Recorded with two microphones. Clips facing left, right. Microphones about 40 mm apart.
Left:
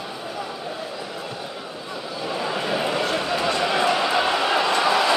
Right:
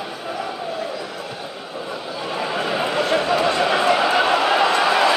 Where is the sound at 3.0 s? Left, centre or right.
Right.